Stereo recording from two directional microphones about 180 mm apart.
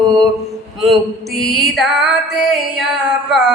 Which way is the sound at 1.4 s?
Centre (ahead or behind).